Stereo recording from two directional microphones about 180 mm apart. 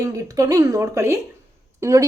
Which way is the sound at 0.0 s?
15° right (ahead or behind).